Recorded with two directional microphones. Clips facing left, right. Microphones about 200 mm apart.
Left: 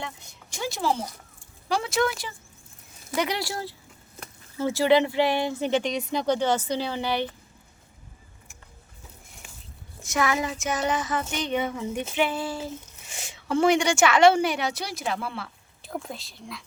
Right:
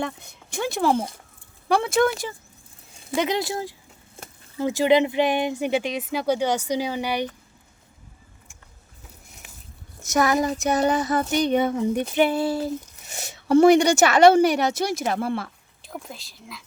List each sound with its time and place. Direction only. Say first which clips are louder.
0.0 s speech: right 8 dB; 55° right (ahead or behind)
3.1 s speech: right 4 dB; 20° right (ahead or behind)
10.0 s speech: right 5 dB; 40° right (ahead or behind)
15.8 s speech: left 3 dB; centre (ahead or behind)